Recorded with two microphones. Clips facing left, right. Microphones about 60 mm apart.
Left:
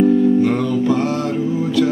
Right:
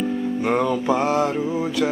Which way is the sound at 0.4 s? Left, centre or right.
Centre.